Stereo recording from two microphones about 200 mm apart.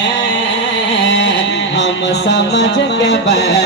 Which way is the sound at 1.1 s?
60° left (ahead or behind).